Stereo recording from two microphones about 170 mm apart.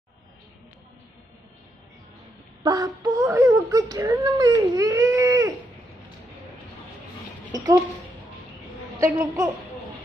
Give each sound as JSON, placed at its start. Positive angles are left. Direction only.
{"t": 2.6, "sound": "speech", "side_deg": -25}
{"t": 7.5, "sound": "speech", "side_deg": -20}
{"t": 9.0, "sound": "a woman's voice", "side_deg": -15}